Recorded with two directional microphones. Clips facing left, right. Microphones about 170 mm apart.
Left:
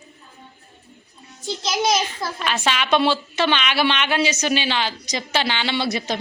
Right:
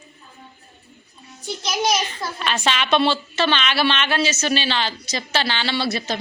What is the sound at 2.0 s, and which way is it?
A woman's voice, 5° left (ahead or behind).